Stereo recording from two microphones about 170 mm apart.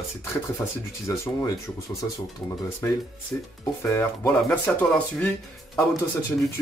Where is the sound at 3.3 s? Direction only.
10° left (ahead or behind).